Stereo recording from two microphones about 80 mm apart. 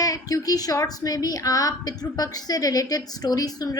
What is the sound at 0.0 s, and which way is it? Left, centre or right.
A woman's voice, left.